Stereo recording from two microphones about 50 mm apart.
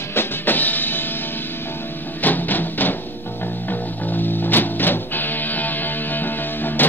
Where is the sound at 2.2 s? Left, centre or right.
Left.